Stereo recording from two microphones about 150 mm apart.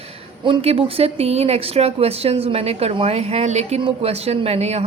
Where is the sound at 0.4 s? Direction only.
40° right (ahead or behind).